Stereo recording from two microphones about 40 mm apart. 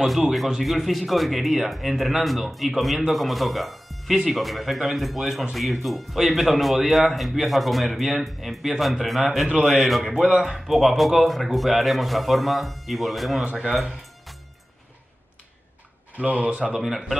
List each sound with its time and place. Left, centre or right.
0.6 s a man's voice: centre
13.4 s speech: right
16.2 s speech: right
16.7 s a man's voice: centre